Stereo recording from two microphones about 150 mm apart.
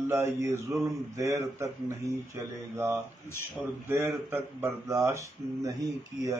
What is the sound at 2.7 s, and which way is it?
Speech, 15° right (ahead or behind).